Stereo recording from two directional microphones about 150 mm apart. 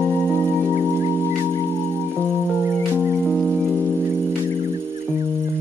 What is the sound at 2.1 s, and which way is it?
Music, 5° left (ahead or behind).